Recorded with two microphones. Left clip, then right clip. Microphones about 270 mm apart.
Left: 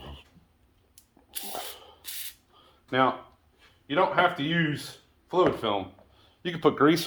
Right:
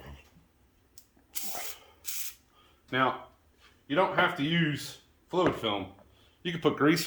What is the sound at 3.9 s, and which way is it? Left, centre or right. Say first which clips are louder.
Speech: left 3 dB; centre.